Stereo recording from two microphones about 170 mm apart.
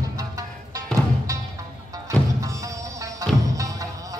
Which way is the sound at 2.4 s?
20° right (ahead or behind).